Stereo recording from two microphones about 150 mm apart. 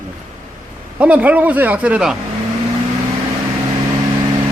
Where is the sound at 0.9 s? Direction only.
10° right (ahead or behind).